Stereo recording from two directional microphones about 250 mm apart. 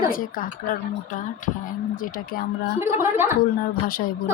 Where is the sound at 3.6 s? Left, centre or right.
Left.